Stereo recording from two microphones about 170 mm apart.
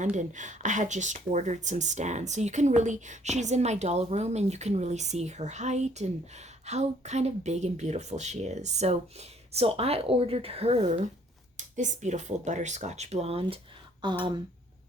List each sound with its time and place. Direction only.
0.0 s speech: 45° right (ahead or behind); by 14.3 s 25° right (ahead or behind)